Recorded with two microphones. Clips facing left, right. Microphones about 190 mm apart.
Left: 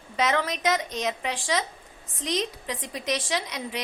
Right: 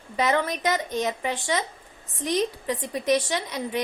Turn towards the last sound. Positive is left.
turn(degrees=0)  # may be behind; listen again after turning